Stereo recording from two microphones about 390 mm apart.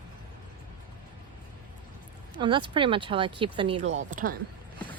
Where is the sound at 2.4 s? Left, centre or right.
Centre.